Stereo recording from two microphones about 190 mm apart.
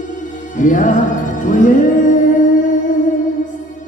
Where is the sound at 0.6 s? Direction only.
45° left (ahead or behind).